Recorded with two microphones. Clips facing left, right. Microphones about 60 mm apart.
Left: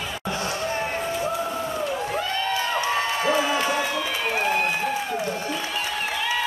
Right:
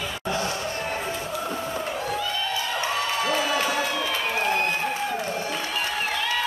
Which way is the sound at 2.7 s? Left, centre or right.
Left.